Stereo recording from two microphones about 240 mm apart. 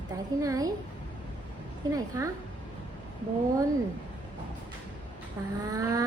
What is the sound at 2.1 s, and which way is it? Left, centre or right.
Humming, centre.